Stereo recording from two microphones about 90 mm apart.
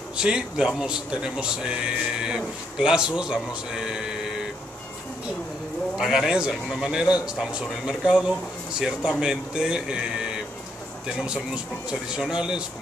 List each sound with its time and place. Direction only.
0.2 s a man's voice: 10° right (ahead or behind)
5.9 s a man's voice: 5° right (ahead or behind)